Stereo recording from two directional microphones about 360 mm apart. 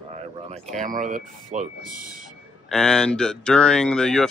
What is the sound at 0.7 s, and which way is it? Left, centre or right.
Speech, right.